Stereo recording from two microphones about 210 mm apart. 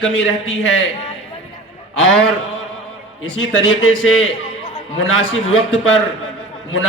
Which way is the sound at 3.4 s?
65° left (ahead or behind).